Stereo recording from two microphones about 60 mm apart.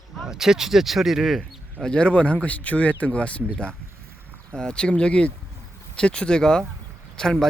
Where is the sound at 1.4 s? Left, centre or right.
Centre.